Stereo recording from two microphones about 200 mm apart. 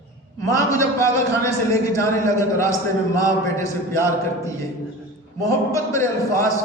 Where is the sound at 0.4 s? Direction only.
15° left (ahead or behind).